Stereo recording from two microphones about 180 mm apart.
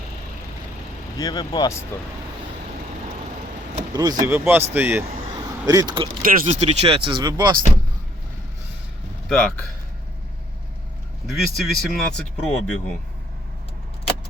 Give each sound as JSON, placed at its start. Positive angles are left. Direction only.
{"t": 1.2, "sound": "speech", "side_deg": 25}
{"t": 3.9, "sound": "speech", "side_deg": -20}
{"t": 5.3, "sound": "vehicle", "side_deg": -20}
{"t": 6.2, "sound": "speech", "side_deg": -45}
{"t": 9.3, "sound": "speech", "side_deg": 5}
{"t": 11.3, "sound": "speech", "side_deg": 0}